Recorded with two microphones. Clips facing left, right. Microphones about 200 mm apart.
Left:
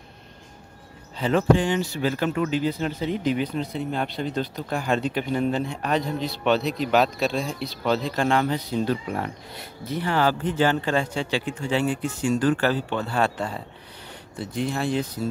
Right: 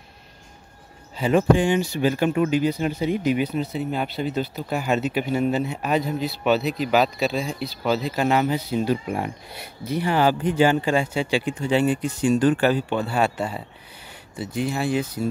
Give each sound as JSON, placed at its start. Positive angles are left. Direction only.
{"t": 1.1, "sound": "speech", "side_deg": -10}